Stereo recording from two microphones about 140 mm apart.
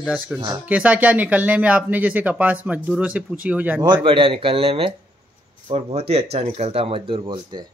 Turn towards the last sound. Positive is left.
turn(degrees=-35)  # may be behind; listen again after turning